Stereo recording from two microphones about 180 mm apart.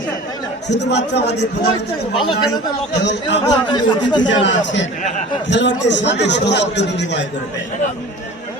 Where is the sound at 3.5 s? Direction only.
25° left (ahead or behind).